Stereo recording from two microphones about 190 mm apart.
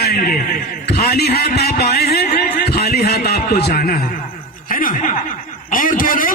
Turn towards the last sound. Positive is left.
turn(degrees=45)  # may be behind; listen again after turning